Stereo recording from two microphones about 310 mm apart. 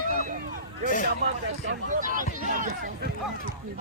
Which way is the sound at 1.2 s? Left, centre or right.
Right.